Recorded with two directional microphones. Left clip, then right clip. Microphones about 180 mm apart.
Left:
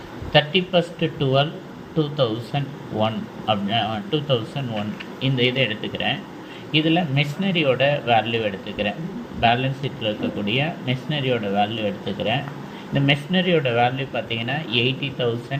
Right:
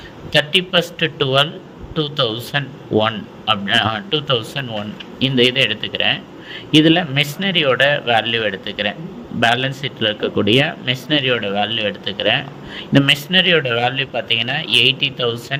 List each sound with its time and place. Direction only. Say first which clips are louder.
0.3 s speech: right 3 dB; 70° right (ahead or behind)